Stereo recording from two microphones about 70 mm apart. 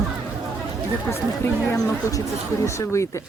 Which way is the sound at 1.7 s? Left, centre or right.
Left.